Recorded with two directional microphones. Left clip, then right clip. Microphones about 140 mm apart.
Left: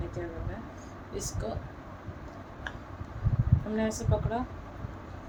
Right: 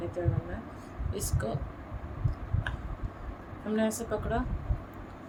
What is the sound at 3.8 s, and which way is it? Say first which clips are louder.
Speech: right 1 dB; 20° right (ahead or behind).